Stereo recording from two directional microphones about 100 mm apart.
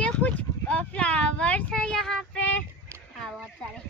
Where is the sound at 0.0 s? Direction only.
15° left (ahead or behind).